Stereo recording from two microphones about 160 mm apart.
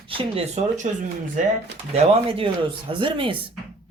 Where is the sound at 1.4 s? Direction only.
55° right (ahead or behind).